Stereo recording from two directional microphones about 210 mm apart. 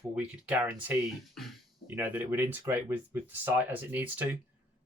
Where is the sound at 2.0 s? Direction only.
10° right (ahead or behind).